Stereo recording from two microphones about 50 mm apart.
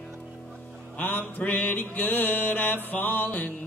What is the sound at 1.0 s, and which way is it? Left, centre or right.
Mantra, left.